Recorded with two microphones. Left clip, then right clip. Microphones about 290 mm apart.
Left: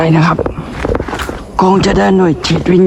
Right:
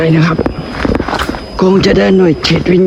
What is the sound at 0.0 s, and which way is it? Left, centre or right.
Speech, centre.